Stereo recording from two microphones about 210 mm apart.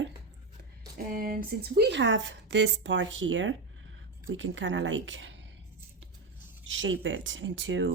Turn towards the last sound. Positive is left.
turn(degrees=-60)  # may be behind; listen again after turning